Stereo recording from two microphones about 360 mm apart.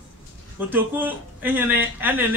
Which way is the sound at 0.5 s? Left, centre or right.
Centre.